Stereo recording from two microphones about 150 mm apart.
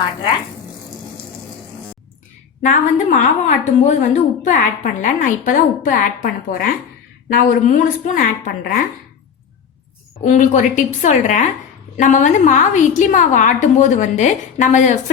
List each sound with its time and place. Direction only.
2.6 s a woman's voice: 55° left (ahead or behind)
10.2 s a woman's voice: 55° left (ahead or behind)